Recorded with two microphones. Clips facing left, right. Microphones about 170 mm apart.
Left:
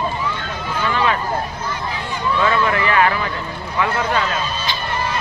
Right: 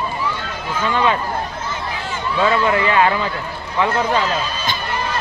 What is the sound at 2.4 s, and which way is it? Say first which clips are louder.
Speech: right 3 dB; 20° right (ahead or behind).